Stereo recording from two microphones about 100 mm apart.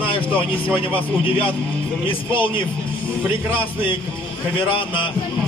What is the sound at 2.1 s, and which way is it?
Speech, 60° left (ahead or behind).